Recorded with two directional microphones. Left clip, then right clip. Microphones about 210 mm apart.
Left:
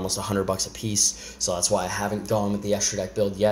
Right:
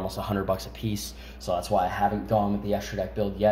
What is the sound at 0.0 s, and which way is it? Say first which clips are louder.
Speech: left 3 dB; 45° left (ahead or behind).